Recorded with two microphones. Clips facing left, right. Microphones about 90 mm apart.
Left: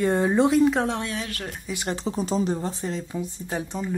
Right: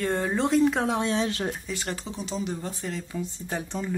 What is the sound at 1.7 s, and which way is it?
Speech, 20° left (ahead or behind).